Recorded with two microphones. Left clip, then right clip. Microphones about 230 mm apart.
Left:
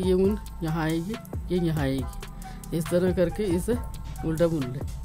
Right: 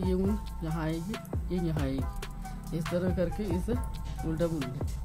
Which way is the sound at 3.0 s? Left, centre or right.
Left.